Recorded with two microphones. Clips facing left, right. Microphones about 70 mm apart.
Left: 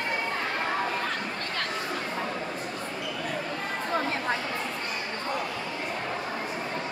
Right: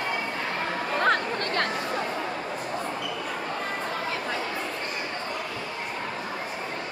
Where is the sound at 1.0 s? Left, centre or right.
Right.